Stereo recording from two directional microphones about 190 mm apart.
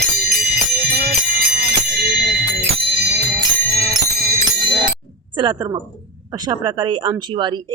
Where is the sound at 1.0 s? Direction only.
50° right (ahead or behind).